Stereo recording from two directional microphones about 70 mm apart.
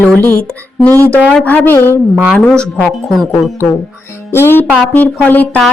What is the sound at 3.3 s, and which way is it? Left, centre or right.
A woman's voice, left.